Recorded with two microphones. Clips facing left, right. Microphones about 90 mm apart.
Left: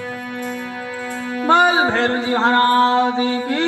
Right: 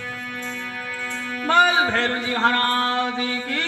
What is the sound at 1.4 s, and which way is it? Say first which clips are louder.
Music: left 4 dB; 20° left (ahead or behind).